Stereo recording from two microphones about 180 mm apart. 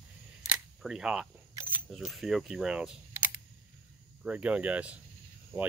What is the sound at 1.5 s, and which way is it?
Single-lens reflex camera, 10° right (ahead or behind).